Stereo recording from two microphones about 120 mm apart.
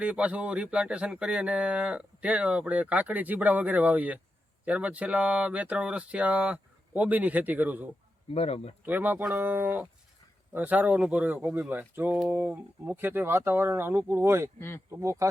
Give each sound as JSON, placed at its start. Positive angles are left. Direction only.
{"t": 0.0, "sound": "speech", "side_deg": -10}
{"t": 8.3, "sound": "speech", "side_deg": 55}
{"t": 8.8, "sound": "speech", "side_deg": -15}